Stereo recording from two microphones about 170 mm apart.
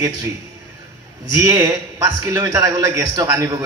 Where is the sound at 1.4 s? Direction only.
20° right (ahead or behind).